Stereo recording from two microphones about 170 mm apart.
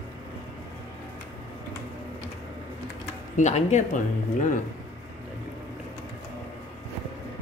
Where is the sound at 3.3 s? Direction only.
45° left (ahead or behind).